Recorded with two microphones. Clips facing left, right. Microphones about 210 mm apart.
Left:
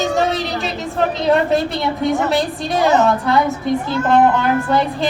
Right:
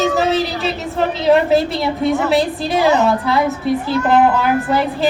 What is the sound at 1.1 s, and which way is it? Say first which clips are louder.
A woman's voice: right 4 dB; centre (ahead or behind).